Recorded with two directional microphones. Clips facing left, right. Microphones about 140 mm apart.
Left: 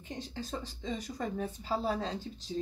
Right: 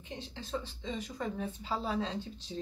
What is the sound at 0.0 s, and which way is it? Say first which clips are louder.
A woman's voice: left 3 dB; 45° left (ahead or behind).